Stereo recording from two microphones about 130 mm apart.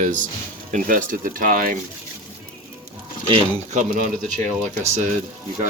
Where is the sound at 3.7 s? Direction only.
80° right.